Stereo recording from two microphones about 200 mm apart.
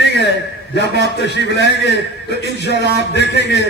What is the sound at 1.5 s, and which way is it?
A man's voice, 55° left (ahead or behind).